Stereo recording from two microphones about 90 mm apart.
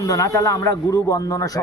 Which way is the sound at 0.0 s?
40° left (ahead or behind).